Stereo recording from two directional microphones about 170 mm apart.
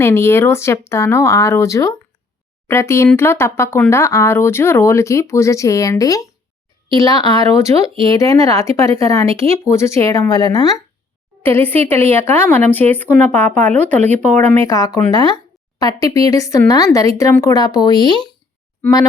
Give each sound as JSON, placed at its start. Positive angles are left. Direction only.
{"t": 0.0, "sound": "speech", "side_deg": 15}
{"t": 14.0, "sound": "speech", "side_deg": -45}
{"t": 14.3, "sound": "speech", "side_deg": 15}